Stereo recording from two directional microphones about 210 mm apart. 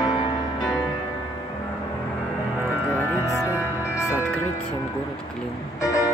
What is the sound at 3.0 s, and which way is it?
Music, 15° left (ahead or behind).